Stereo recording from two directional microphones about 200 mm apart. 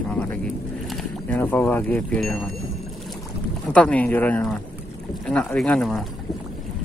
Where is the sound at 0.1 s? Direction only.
5° left (ahead or behind).